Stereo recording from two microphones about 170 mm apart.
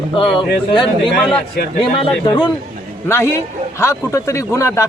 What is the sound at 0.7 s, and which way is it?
Speech, 30° left (ahead or behind).